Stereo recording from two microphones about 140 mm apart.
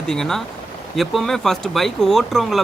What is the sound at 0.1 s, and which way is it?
Speech, 5° left (ahead or behind).